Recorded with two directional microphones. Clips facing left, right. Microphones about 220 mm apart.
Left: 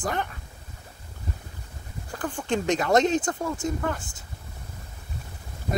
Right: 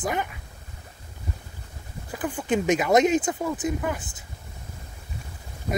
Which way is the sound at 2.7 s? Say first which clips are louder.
Right 2 dB; 20° right (ahead or behind).